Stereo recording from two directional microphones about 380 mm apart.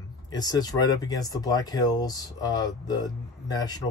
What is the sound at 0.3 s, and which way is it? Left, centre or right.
Speech, centre.